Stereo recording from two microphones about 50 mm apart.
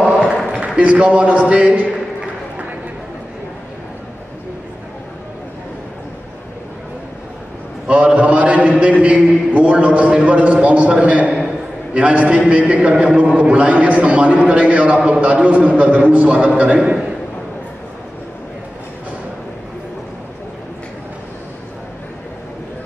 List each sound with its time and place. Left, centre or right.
0.7 s a man's voice: right
7.8 s a sound: right
9.0 s a man's voice: right